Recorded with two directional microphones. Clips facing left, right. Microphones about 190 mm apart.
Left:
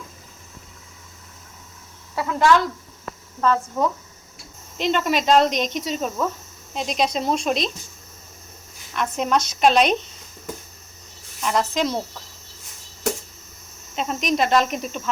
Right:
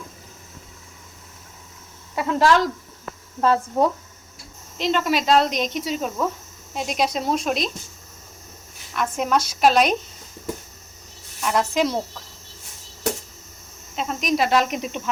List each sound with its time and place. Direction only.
2.2 s speech: 20° right (ahead or behind)
3.4 s speech: 35° right (ahead or behind)
4.8 s insect: centre (ahead or behind)
8.9 s insect: 5° right (ahead or behind)
11.3 s speech: 5° right (ahead or behind)
13.9 s cricket: centre (ahead or behind); by 15.1 s 15° right (ahead or behind)